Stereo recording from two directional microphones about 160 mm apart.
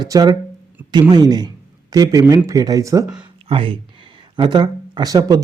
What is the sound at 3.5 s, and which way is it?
Speech, 35° right (ahead or behind).